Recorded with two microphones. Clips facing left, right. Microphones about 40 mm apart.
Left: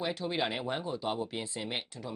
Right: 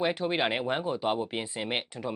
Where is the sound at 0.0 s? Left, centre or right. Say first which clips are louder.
Right 5 dB; right.